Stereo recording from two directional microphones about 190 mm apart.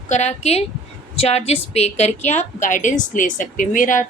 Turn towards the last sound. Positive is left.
turn(degrees=45)  # may be behind; listen again after turning